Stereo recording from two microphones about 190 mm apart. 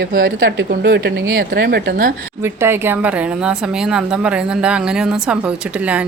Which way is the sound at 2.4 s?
15° right (ahead or behind).